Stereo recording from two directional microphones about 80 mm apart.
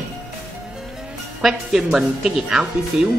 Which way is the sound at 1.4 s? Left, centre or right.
Centre.